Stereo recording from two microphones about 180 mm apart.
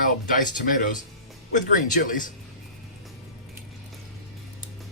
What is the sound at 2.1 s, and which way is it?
Speech, 45° left (ahead or behind).